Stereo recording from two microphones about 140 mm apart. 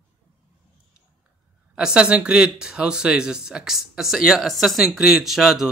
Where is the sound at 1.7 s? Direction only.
5° right (ahead or behind).